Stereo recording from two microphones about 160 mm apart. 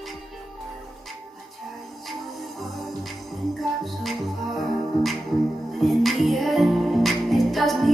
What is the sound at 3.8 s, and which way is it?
Music, centre (ahead or behind).